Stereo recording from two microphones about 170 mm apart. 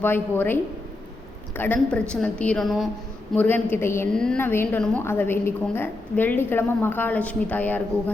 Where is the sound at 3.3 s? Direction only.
10° left (ahead or behind).